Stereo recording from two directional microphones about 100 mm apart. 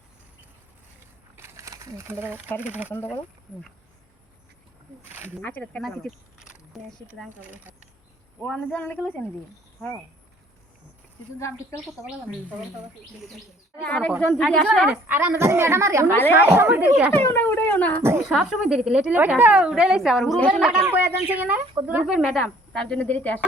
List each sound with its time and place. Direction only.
1.4 s a sound: 30° right (ahead or behind)
2.6 s a woman's voice: 15° right (ahead or behind)
5.4 s speech: 20° left (ahead or behind)
5.8 s speech: centre (ahead or behind)
8.7 s a woman's voice: 15° left (ahead or behind)
11.3 s speech: 30° left (ahead or behind)
13.8 s a woman's voice: 5° left (ahead or behind)
15.0 s a woman's voice: 20° right (ahead or behind)
17.2 s a sound: 20° left (ahead or behind)
18.3 s a woman's voice: 5° right (ahead or behind)
20.9 s a woman's voice: 15° right (ahead or behind)
22.7 s a woman's voice: 10° left (ahead or behind)